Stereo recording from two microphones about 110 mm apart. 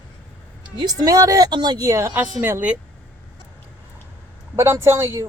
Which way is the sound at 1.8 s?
25° right (ahead or behind).